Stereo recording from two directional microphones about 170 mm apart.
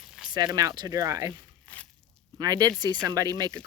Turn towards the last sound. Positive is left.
turn(degrees=-20)  # may be behind; listen again after turning